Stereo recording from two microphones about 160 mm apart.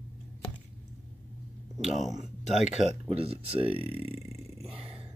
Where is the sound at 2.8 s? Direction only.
35° right (ahead or behind).